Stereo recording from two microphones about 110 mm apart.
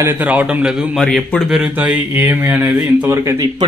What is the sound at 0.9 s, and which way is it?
Speech, 5° left (ahead or behind).